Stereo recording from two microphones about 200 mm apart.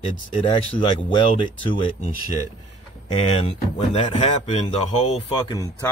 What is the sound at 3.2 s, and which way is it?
Speech, 30° left (ahead or behind).